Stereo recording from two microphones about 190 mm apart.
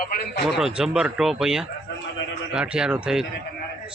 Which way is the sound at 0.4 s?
Centre (ahead or behind).